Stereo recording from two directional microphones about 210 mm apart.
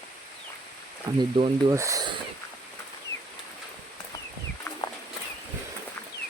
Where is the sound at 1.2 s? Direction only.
20° right (ahead or behind).